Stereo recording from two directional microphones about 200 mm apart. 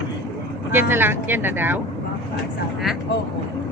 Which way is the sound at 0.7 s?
10° right (ahead or behind).